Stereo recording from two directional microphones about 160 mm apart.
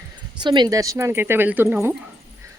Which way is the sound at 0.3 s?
30° right (ahead or behind).